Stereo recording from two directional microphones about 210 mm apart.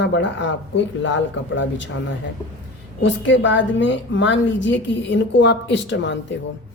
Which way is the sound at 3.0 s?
60° left (ahead or behind).